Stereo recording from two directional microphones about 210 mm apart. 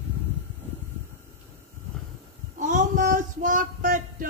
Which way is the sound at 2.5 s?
35° right (ahead or behind).